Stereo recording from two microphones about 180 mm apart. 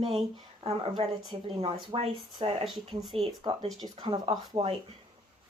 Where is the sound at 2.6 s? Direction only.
Centre (ahead or behind).